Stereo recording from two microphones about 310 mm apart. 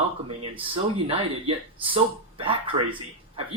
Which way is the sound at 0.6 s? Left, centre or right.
Centre.